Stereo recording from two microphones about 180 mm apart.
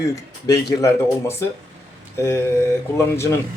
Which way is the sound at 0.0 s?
20° left (ahead or behind).